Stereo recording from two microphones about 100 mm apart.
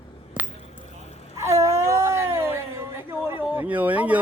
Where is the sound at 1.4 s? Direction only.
30° right (ahead or behind).